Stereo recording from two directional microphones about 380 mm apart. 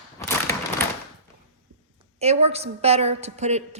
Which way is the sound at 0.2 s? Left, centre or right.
Centre.